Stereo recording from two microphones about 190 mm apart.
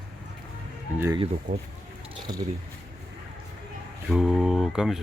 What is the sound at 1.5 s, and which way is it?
Speech, 45° right (ahead or behind).